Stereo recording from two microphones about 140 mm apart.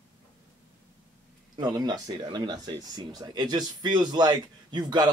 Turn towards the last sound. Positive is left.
turn(degrees=-30)  # may be behind; listen again after turning